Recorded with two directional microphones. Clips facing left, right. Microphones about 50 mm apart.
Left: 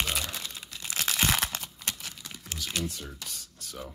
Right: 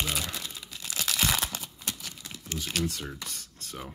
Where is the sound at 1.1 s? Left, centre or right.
Centre.